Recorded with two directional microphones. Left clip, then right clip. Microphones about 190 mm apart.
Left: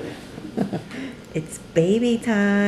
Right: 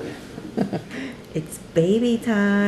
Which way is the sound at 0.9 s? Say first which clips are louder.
Even; centre (ahead or behind).